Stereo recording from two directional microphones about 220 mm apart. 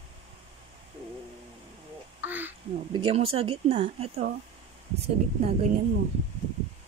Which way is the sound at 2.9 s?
25° right (ahead or behind).